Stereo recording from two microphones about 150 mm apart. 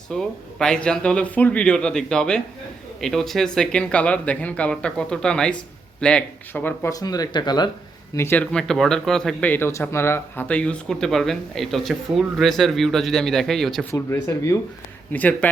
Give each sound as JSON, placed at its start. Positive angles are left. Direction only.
{"t": 0.1, "sound": "speech", "side_deg": 5}
{"t": 6.9, "sound": "speech", "side_deg": 25}
{"t": 8.1, "sound": "speech", "side_deg": 15}
{"t": 13.9, "sound": "speech", "side_deg": 20}